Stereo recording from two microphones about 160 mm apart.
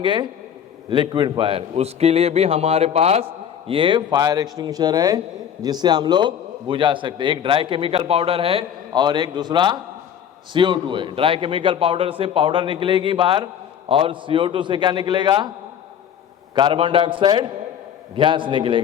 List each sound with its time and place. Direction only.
0.0 s a man's voice: 30° right (ahead or behind)
16.6 s a man's voice: 30° right (ahead or behind)